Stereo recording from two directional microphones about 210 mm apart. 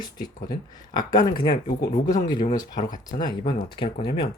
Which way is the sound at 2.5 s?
20° left (ahead or behind).